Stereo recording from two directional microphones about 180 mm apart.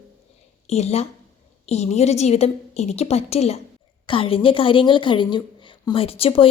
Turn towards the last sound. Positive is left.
turn(degrees=30)  # may be behind; listen again after turning